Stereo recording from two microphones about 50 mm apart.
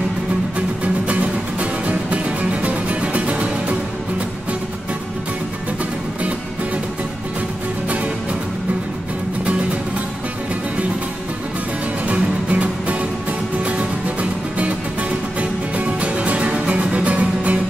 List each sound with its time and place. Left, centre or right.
0.6 s music: right
12.1 s music: right
15.8 s music: right